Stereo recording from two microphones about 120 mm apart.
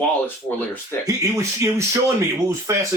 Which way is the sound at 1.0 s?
25° right (ahead or behind).